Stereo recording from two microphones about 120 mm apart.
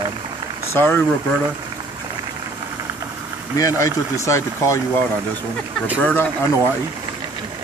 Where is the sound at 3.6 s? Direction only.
30° left (ahead or behind).